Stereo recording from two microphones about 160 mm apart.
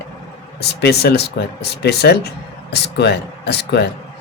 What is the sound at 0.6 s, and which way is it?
Speech, 90° left.